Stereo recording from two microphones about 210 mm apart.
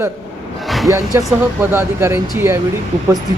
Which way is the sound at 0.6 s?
Centre (ahead or behind).